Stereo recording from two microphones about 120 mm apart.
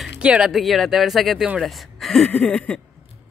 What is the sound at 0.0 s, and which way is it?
Speech, 10° right (ahead or behind).